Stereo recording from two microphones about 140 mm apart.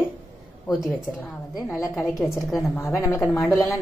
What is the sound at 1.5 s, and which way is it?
A woman's voice, 5° right (ahead or behind).